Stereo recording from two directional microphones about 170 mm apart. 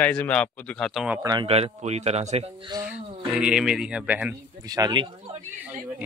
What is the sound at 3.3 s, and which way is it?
Speech, 5° right (ahead or behind).